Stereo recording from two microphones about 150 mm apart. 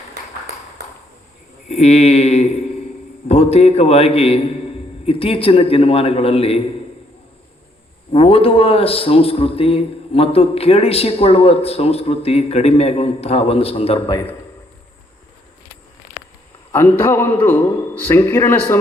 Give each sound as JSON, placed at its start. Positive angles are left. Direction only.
{"t": 1.6, "sound": "a man's voice", "side_deg": 50}
{"t": 8.1, "sound": "a man's voice", "side_deg": 40}
{"t": 16.7, "sound": "a man's voice", "side_deg": 15}